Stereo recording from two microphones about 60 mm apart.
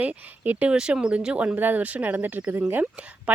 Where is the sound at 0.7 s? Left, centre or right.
Centre.